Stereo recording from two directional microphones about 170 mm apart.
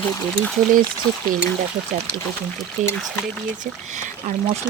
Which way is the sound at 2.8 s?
45° right (ahead or behind).